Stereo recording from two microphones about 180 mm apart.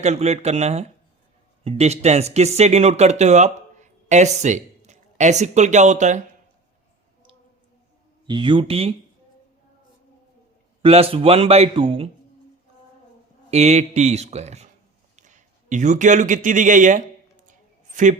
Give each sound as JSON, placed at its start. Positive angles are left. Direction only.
{"t": 0.0, "sound": "a man's voice", "side_deg": -35}
{"t": 8.3, "sound": "speech", "side_deg": -25}
{"t": 10.8, "sound": "a man's voice", "side_deg": -30}
{"t": 13.5, "sound": "a man's voice", "side_deg": -40}